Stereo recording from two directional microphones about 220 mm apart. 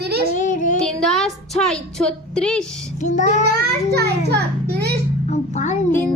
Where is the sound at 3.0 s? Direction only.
35° left (ahead or behind).